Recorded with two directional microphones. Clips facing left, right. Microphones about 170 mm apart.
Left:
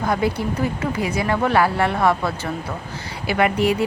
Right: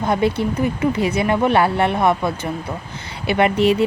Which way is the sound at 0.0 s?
25° right (ahead or behind).